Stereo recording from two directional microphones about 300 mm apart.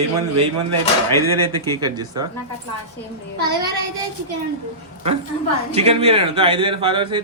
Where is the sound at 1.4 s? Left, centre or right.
Centre.